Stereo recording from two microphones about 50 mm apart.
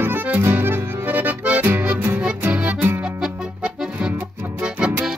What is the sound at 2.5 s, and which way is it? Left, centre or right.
Music, right.